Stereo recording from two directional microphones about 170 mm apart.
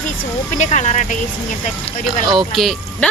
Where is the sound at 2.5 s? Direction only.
Centre (ahead or behind).